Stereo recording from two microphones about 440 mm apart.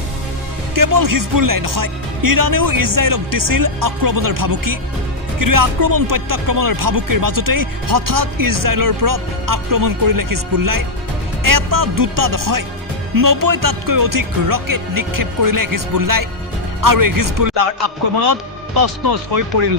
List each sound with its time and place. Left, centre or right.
0.7 s speech: right
19.4 s speech: right